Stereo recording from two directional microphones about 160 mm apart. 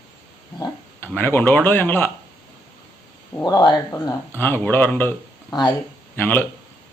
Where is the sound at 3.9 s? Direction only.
15° left (ahead or behind).